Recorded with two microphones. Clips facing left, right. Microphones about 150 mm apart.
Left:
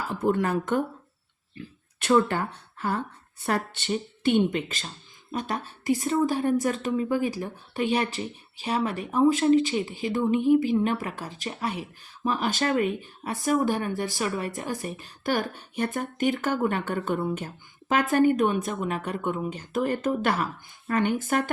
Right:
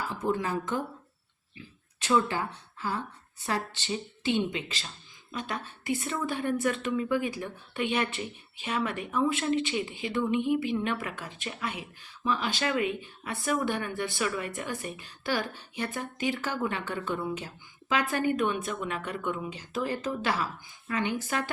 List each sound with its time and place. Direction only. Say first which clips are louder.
0.1 s speech: left 7 dB; 60° left (ahead or behind)
5.3 s a woman's voice: left 5 dB; 40° left (ahead or behind)